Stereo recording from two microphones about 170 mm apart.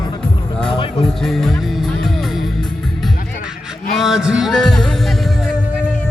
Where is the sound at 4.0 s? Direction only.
5° right (ahead or behind).